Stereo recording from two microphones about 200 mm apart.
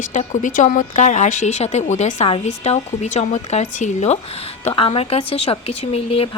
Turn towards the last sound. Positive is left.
turn(degrees=30)  # may be behind; listen again after turning